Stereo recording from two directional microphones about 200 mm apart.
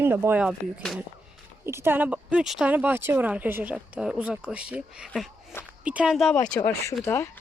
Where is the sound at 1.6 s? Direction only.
10° right (ahead or behind).